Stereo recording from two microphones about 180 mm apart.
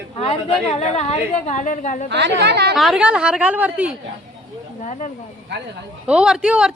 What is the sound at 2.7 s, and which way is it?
A woman's voice, centre (ahead or behind).